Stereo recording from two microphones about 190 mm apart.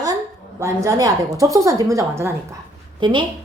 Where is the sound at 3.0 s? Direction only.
25° right (ahead or behind).